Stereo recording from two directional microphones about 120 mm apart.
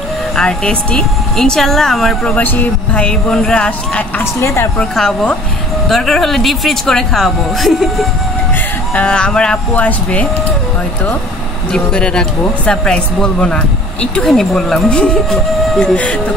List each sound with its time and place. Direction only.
0.4 s speech: 5° left (ahead or behind)
2.3 s speech: 15° left (ahead or behind)
4.2 s speech: 20° left (ahead or behind)
4.7 s speech: 5° left (ahead or behind)
11.7 s speech: 5° left (ahead or behind)